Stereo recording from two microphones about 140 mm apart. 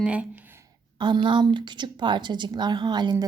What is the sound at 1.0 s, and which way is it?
Speech, 35° right (ahead or behind).